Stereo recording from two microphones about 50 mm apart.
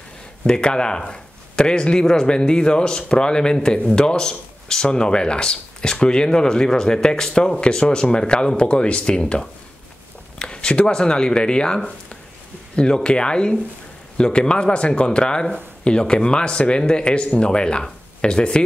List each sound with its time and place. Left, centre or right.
0.4 s speech: centre